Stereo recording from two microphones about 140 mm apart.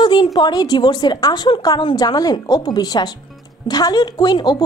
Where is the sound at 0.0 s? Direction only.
35° left (ahead or behind).